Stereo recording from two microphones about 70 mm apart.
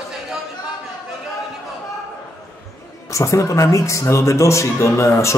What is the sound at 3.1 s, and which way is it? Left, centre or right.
A man's voice, left.